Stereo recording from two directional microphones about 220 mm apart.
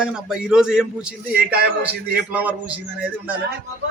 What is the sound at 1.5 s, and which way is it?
Speech, 45° right (ahead or behind).